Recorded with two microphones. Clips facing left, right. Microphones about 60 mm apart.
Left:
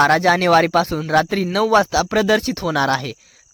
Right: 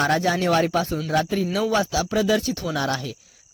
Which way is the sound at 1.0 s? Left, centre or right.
Left.